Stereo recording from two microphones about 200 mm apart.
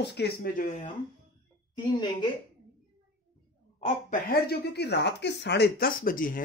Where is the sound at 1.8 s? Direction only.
20° left (ahead or behind).